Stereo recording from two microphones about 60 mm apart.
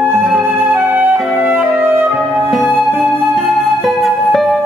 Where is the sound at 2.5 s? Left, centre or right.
Centre.